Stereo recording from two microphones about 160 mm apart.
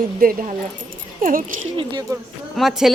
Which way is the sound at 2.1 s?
20° right (ahead or behind).